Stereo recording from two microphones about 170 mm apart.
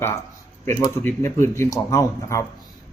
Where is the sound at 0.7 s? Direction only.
15° left (ahead or behind).